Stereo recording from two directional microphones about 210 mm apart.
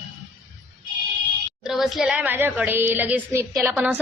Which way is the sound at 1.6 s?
Centre (ahead or behind).